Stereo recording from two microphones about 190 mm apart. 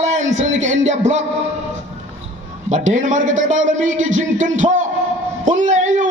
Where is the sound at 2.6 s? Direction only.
40° right (ahead or behind).